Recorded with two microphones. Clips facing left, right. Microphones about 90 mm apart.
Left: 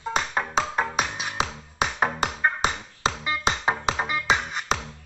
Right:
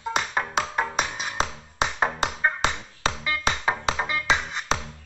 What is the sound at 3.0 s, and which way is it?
Music, 25° left (ahead or behind).